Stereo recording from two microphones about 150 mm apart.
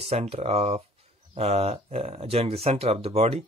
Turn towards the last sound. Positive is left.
turn(degrees=-40)  # may be behind; listen again after turning